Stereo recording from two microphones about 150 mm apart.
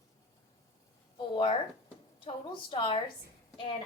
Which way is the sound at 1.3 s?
35° left (ahead or behind).